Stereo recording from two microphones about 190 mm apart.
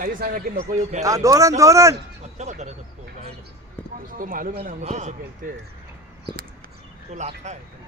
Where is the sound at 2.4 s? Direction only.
35° right (ahead or behind).